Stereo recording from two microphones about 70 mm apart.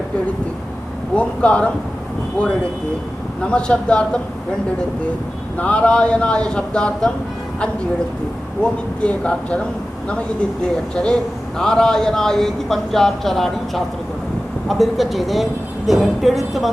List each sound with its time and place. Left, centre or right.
1.1 s a man's voice: centre
3.4 s a man's voice: centre
5.5 s a man's voice: centre
8.6 s a man's voice: centre
10.9 s a man's voice: centre